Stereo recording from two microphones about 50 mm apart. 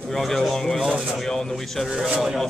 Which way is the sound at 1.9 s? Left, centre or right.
Centre.